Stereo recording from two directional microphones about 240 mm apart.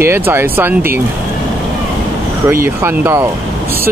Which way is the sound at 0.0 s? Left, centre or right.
Centre.